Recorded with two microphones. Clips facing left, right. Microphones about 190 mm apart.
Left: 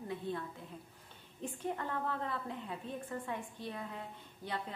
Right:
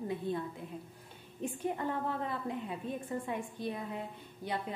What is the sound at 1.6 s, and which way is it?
A woman's voice, 15° right (ahead or behind).